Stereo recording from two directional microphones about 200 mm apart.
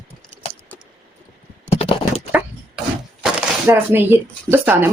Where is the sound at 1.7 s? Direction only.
30° left (ahead or behind).